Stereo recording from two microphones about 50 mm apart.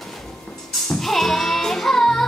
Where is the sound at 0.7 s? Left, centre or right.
Centre.